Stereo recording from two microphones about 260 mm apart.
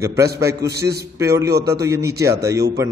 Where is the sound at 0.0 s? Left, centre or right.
Centre.